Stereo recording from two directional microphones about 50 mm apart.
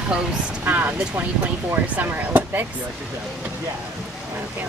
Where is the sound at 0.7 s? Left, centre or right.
Right.